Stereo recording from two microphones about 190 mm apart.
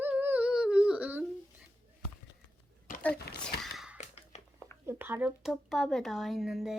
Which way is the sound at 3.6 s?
Centre (ahead or behind).